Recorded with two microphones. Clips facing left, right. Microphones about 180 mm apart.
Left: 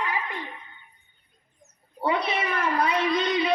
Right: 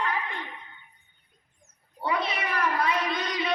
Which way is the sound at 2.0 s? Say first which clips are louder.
Left 3 dB; 25° left (ahead or behind).